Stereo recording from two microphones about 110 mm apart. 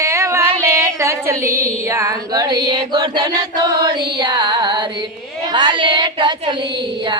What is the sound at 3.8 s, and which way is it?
Music, 40° right (ahead or behind).